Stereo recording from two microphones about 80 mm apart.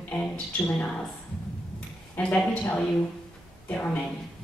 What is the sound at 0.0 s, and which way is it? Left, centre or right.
Speech, centre.